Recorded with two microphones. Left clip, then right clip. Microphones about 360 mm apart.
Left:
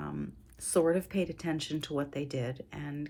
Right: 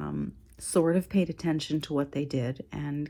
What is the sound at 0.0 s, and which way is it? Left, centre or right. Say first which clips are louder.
Speech: right 4 dB; centre.